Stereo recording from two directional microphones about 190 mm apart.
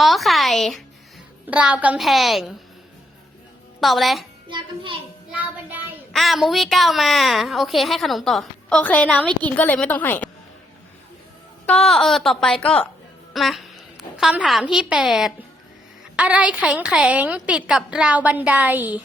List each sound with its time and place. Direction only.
0.0 s a sound: centre (ahead or behind)
1.5 s a woman's voice: 5° right (ahead or behind)
3.8 s a woman's voice: centre (ahead or behind)
4.4 s a child's voice: 25° right (ahead or behind)
5.4 s a woman's voice: 10° right (ahead or behind); by 10.2 s 10° left (ahead or behind)
11.6 s a woman's voice: 5° left (ahead or behind)